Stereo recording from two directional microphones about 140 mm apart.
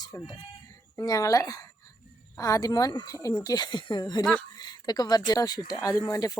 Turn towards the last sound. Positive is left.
turn(degrees=25)  # may be behind; listen again after turning